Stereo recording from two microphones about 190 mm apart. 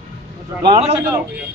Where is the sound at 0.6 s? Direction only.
35° right (ahead or behind).